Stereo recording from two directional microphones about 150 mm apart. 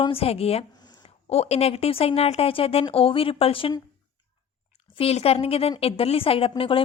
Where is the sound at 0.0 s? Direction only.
40° left (ahead or behind).